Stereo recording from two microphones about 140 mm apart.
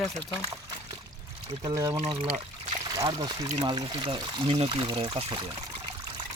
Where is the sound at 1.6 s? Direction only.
25° right (ahead or behind).